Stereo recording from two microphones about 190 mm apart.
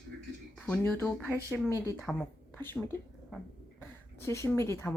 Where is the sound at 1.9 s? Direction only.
Centre (ahead or behind).